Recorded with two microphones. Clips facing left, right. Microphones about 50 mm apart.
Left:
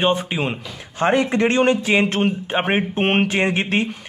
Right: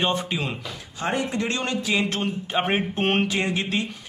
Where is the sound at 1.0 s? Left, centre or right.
Left.